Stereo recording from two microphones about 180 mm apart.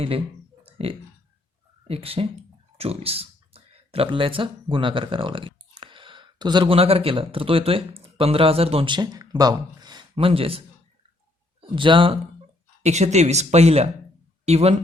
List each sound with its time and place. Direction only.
0.6 s a sound: 30° right (ahead or behind)
1.9 s speech: 30° right (ahead or behind)
11.6 s speech: 25° right (ahead or behind)